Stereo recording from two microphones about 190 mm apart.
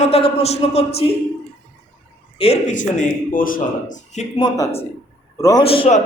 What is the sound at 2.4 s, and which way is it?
Speech, 35° left (ahead or behind).